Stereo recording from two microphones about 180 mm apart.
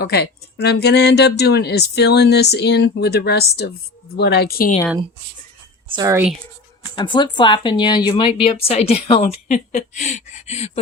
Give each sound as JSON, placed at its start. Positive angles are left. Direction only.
{"t": 0.0, "sound": "speech", "side_deg": 60}
{"t": 6.0, "sound": "speech", "side_deg": -15}
{"t": 6.9, "sound": "speech", "side_deg": 25}